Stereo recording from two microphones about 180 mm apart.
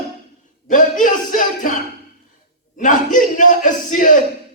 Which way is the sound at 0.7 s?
45° left (ahead or behind).